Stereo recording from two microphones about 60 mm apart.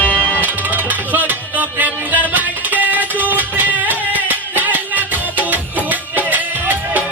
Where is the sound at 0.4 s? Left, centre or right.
Right.